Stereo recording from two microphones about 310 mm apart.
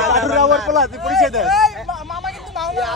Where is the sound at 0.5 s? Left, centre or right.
Centre.